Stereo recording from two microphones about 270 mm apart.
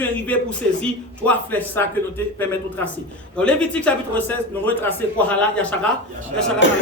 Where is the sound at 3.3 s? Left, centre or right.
Centre.